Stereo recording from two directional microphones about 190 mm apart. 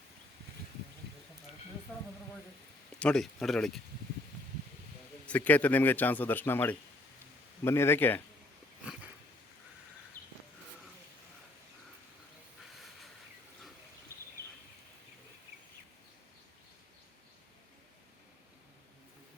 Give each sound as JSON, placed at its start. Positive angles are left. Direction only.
{"t": 3.0, "sound": "speech", "side_deg": 5}
{"t": 5.2, "sound": "a man's voice", "side_deg": 10}
{"t": 10.2, "sound": "a sound", "side_deg": -20}